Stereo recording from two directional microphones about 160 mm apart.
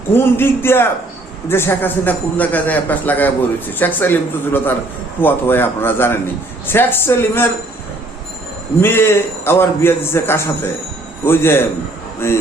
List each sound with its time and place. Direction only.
0.1 s a man's voice: 15° left (ahead or behind)
8.8 s a man's voice: 15° left (ahead or behind)